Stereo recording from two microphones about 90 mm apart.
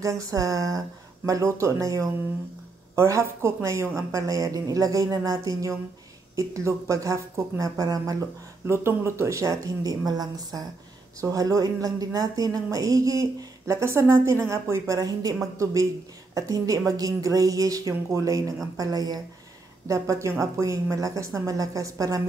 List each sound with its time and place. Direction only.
0.0 s speech: 35° right (ahead or behind)
8.6 s speech: 30° right (ahead or behind); by 19.2 s 45° right (ahead or behind)
19.9 s speech: 35° right (ahead or behind)